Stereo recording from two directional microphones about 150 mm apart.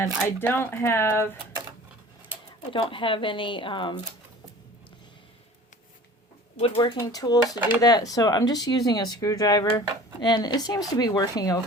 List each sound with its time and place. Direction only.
0.0 s speech: 15° left (ahead or behind)
2.7 s speech: 35° left (ahead or behind)
6.6 s speech: 35° left (ahead or behind)
7.1 s speech: 25° left (ahead or behind)